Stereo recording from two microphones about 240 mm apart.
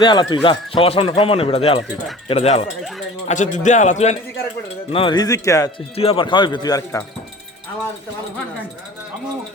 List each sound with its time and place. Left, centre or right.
0.0 s a man's voice: centre